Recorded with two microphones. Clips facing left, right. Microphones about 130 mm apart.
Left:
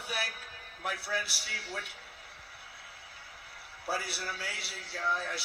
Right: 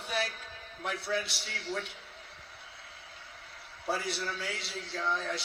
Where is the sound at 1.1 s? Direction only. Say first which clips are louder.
Right 3 dB; 5° left (ahead or behind).